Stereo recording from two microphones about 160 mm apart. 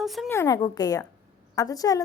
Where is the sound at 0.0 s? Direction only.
Centre (ahead or behind).